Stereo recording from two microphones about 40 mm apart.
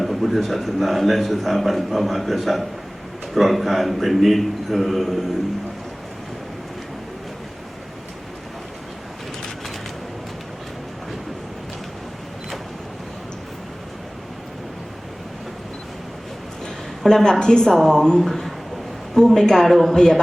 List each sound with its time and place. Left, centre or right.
0.0 s a man's voice: centre
17.0 s a woman's voice: centre
18.2 s a man's voice: centre